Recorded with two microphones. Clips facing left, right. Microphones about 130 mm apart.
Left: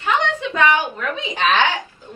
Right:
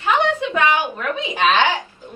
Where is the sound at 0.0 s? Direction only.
15° right (ahead or behind).